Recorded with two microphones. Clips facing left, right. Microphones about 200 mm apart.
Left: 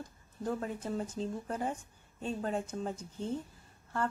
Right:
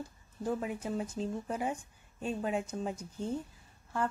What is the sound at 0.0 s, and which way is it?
Speech, 10° right (ahead or behind).